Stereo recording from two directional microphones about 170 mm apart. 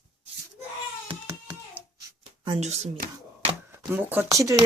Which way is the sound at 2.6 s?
40° right (ahead or behind).